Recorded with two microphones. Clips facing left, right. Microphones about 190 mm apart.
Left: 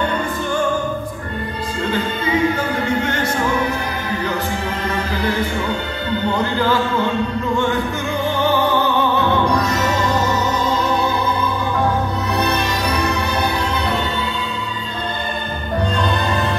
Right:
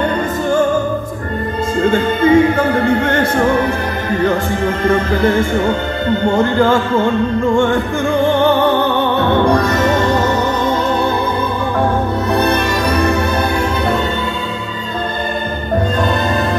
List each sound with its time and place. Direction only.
1.8 s music: 50° right (ahead or behind)
4.8 s music: 50° right (ahead or behind)
9.4 s music: 55° right (ahead or behind)
12.3 s music: 55° right (ahead or behind)